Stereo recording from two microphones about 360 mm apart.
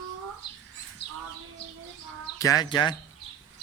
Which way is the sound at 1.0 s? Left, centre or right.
Left.